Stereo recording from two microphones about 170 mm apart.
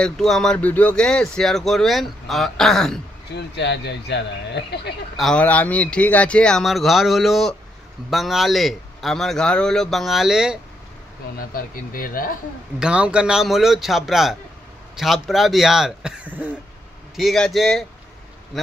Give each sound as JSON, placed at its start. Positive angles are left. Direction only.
{"t": 0.0, "sound": "speech", "side_deg": 5}
{"t": 3.3, "sound": "speech", "side_deg": 85}
{"t": 5.1, "sound": "speech", "side_deg": 5}
{"t": 11.3, "sound": "speech", "side_deg": 60}
{"t": 12.7, "sound": "speech", "side_deg": -5}